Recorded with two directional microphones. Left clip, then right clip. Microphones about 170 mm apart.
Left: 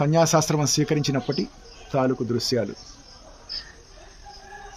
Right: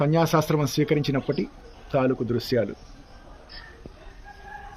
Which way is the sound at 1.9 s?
55° left (ahead or behind).